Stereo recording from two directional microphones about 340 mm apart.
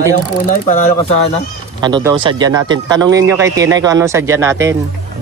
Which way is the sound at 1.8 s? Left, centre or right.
Centre.